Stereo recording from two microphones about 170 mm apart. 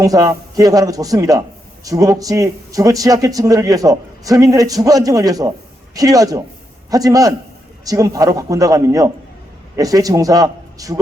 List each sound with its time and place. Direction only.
0.0 s a man's voice: 20° right (ahead or behind)